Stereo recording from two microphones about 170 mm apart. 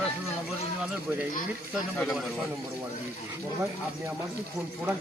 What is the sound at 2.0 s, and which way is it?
Speech, centre (ahead or behind).